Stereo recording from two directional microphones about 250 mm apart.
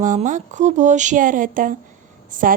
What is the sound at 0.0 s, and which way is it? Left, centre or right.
A woman's voice, right.